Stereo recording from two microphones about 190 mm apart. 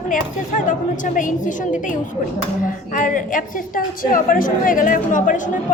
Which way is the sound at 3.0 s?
45° left (ahead or behind).